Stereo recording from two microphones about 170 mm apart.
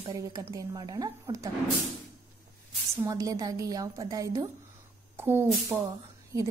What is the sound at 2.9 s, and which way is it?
A woman's voice, 15° right (ahead or behind).